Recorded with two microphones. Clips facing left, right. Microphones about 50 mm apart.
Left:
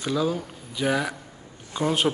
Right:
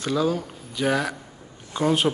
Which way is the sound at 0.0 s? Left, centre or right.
Centre.